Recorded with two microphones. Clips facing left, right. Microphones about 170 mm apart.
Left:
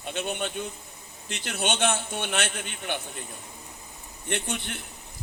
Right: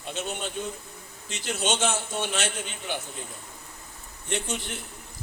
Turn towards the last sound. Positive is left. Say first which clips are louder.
# even
turn(degrees=60)  # may be behind; listen again after turning